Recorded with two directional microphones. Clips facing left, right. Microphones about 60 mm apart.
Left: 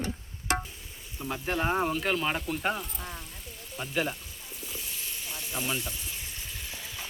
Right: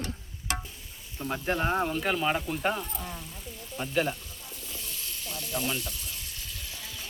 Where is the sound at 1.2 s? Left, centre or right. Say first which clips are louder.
Right 1 dB; centre.